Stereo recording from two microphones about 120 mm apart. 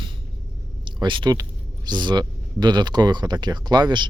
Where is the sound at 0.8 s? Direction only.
40° right (ahead or behind).